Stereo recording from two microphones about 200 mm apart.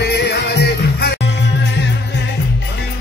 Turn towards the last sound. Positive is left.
turn(degrees=55)  # may be behind; listen again after turning